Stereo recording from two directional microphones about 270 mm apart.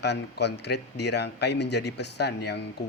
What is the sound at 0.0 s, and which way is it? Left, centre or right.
Speech, left.